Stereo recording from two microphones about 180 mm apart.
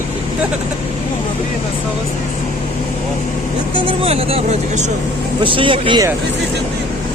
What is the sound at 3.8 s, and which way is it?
Speech, 30° right (ahead or behind).